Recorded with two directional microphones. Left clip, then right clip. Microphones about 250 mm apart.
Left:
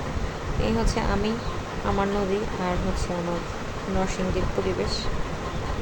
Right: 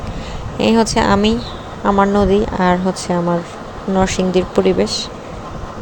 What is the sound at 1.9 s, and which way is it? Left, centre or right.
A woman's voice, right.